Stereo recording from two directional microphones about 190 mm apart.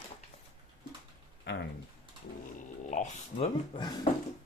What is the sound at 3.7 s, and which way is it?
Speech, 25° left (ahead or behind).